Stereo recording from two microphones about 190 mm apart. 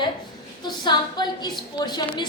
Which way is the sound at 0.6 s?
25° left (ahead or behind).